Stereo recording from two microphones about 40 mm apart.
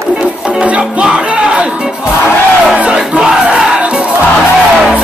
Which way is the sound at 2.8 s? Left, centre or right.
Right.